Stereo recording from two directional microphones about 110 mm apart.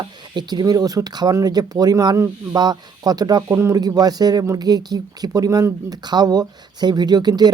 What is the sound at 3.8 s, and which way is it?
Speech, 35° right (ahead or behind).